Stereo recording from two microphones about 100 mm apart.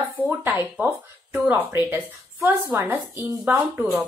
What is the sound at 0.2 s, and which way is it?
Speech, 20° left (ahead or behind).